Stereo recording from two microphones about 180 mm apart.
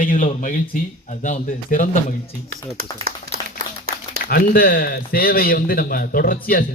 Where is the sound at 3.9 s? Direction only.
55° right (ahead or behind).